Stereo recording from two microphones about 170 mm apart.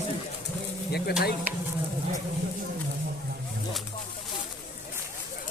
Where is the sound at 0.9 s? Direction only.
70° left (ahead or behind).